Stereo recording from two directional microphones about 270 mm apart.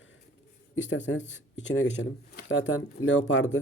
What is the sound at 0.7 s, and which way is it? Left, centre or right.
Speech, left.